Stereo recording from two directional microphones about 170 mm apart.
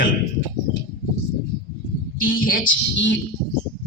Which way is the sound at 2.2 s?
55° left (ahead or behind).